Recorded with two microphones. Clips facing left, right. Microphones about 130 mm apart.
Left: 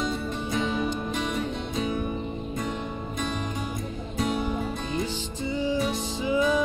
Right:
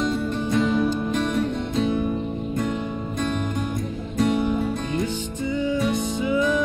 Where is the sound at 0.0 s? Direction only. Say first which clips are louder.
Right 5 dB; centre (ahead or behind).